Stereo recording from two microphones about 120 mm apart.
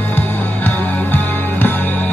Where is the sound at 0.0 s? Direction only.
15° left (ahead or behind).